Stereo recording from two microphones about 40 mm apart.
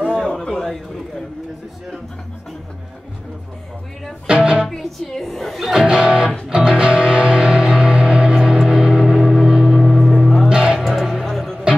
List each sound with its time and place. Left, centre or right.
0.1 s a sound: centre
0.4 s a sound: centre
4.3 s speech: right
4.6 s speech: centre
5.7 s speech: centre
5.9 s speech: right
6.8 s music: right
8.9 s gong: centre
10.1 s music: centre
10.5 s music: centre
10.8 s music: centre